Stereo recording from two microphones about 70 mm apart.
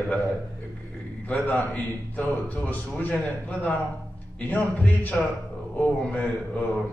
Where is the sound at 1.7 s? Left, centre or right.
Centre.